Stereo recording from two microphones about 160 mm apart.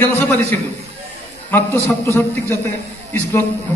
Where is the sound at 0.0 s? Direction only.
10° left (ahead or behind).